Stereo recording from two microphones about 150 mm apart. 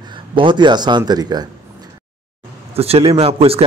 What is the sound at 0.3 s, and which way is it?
Speech, 35° right (ahead or behind).